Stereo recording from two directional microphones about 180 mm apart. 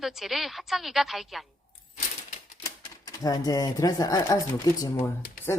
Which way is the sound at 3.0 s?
20° left (ahead or behind).